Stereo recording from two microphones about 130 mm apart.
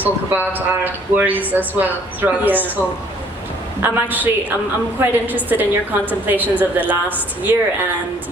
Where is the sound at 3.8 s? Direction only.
15° right (ahead or behind).